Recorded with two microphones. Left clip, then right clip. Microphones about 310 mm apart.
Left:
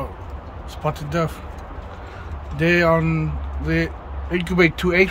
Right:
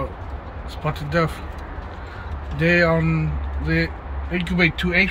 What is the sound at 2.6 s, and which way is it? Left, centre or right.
Speech, centre.